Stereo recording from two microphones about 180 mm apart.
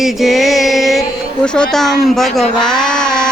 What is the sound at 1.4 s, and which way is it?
Speech, 5° left (ahead or behind).